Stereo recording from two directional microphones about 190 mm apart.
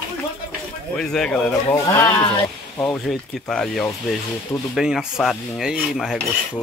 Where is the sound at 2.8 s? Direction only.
Centre (ahead or behind).